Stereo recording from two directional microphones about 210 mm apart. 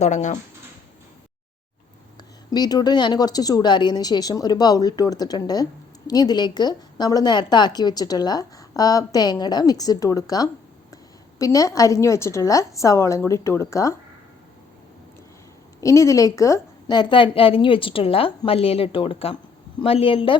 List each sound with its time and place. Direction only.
0.0 s speech: 35° left (ahead or behind)
2.5 s a woman's voice: 20° left (ahead or behind)
15.8 s a woman's voice: 15° left (ahead or behind)